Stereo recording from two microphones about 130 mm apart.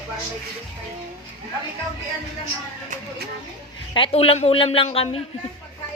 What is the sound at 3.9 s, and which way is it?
Speech, 45° left (ahead or behind).